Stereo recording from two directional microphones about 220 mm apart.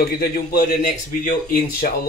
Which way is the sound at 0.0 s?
45° left (ahead or behind).